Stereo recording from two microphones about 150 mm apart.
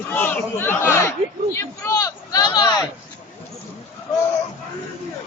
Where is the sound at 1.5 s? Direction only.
20° left (ahead or behind).